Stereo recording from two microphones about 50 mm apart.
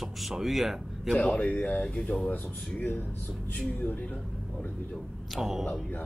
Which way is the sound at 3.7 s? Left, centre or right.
Left.